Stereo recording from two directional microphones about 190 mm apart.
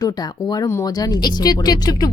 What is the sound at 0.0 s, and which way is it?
Speech, 20° left (ahead or behind).